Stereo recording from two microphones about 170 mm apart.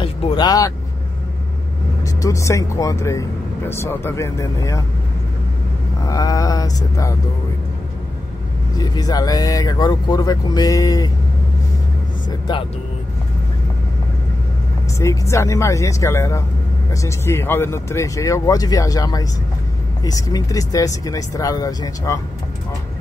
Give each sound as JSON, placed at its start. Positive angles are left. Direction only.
{"t": 0.0, "sound": "vehicle", "side_deg": 30}
{"t": 2.2, "sound": "speech", "side_deg": 20}
{"t": 6.0, "sound": "speech", "side_deg": 20}
{"t": 8.7, "sound": "speech", "side_deg": 20}
{"t": 12.3, "sound": "speech", "side_deg": 25}
{"t": 15.0, "sound": "speech", "side_deg": 15}